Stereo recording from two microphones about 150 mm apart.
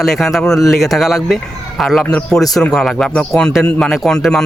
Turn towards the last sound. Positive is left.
turn(degrees=5)  # may be behind; listen again after turning